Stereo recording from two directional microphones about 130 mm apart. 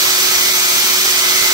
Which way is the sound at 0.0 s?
30° right (ahead or behind).